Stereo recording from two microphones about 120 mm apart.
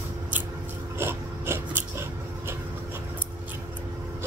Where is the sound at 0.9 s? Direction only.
20° right (ahead or behind).